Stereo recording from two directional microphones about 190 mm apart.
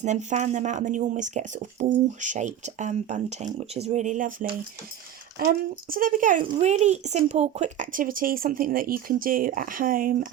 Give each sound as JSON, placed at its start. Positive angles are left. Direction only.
{"t": 0.0, "sound": "speech", "side_deg": -40}
{"t": 6.4, "sound": "speech", "side_deg": -35}